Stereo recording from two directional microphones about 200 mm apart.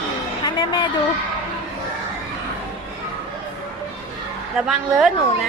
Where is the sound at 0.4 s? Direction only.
20° left (ahead or behind).